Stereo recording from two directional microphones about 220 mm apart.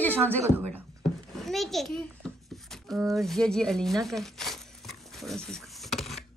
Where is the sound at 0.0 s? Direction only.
5° left (ahead or behind).